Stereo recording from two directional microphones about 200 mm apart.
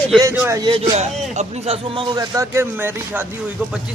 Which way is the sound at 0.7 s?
30° right (ahead or behind).